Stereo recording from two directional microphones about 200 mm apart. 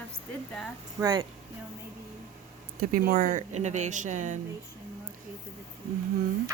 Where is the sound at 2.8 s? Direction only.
45° right (ahead or behind).